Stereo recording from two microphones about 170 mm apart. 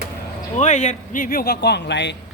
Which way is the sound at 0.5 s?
45° left (ahead or behind).